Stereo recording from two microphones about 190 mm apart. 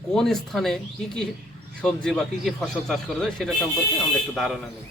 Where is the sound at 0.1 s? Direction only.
Centre (ahead or behind).